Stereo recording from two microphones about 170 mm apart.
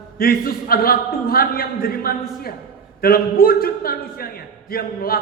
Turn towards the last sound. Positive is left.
turn(degrees=60)  # may be behind; listen again after turning